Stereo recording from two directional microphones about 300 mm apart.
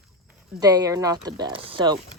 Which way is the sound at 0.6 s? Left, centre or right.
Centre.